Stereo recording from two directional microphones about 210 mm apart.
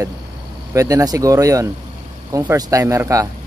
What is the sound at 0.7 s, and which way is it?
Speech, 15° right (ahead or behind).